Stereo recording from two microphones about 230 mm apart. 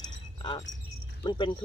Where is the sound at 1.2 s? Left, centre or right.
Centre.